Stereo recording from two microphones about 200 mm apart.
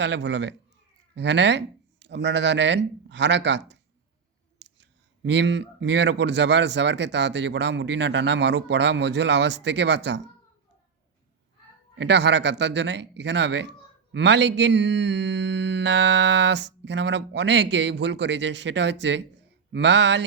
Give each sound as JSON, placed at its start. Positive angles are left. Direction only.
{"t": 0.0, "sound": "speech", "side_deg": -60}
{"t": 11.9, "sound": "speech", "side_deg": -60}